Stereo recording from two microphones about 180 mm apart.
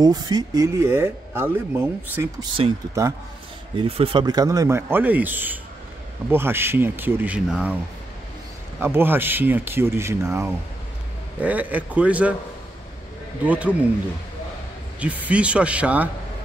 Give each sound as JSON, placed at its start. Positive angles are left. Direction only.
{"t": 0.0, "sound": "speech", "side_deg": -25}
{"t": 2.6, "sound": "speech", "side_deg": -30}
{"t": 3.0, "sound": "speech", "side_deg": -15}
{"t": 3.7, "sound": "speech", "side_deg": -30}
{"t": 8.7, "sound": "speech", "side_deg": -10}
{"t": 13.5, "sound": "speech", "side_deg": -10}
{"t": 15.0, "sound": "speech", "side_deg": -10}